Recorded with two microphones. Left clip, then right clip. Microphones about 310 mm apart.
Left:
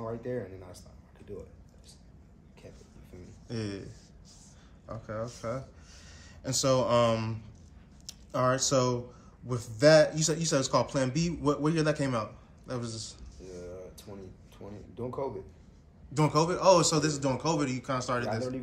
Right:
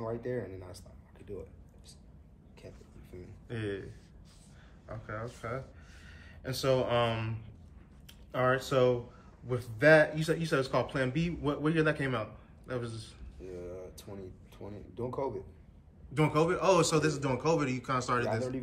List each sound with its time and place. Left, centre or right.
0.0 s speech: centre
2.6 s a sound: centre
3.4 s a man's voice: centre
4.8 s a man's voice: centre
13.5 s a man's voice: centre
16.2 s a man's voice: centre